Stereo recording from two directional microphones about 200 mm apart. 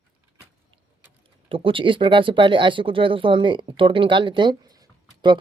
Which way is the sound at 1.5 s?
25° right (ahead or behind).